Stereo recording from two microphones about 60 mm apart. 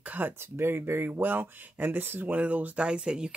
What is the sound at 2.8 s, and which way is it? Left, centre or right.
Speech, centre.